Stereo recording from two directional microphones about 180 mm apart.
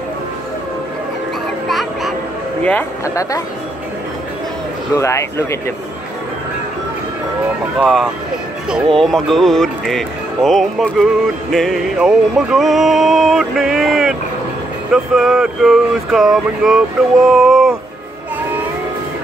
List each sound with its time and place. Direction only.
1.7 s a sound: centre (ahead or behind)
2.6 s speech: 10° left (ahead or behind)
4.9 s speech: 15° left (ahead or behind)
7.8 s music: centre (ahead or behind)
17.3 s speech: centre (ahead or behind)